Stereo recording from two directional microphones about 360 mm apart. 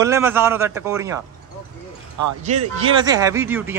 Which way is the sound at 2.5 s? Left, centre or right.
Right.